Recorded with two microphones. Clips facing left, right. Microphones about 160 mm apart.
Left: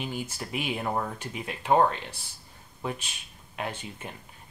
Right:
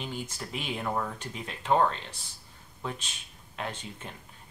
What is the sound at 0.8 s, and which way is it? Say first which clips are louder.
Speech: right 1 dB; 20° left (ahead or behind).